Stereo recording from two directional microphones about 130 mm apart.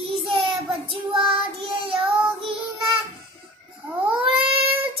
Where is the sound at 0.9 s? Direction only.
45° right (ahead or behind).